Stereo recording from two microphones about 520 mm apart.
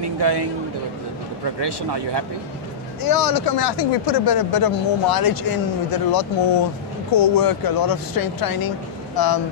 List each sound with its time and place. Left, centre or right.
0.0 s a sound: right
1.6 s speech: right
3.0 s speech: left